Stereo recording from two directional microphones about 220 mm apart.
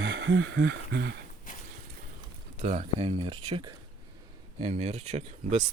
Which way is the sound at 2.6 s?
30° right (ahead or behind).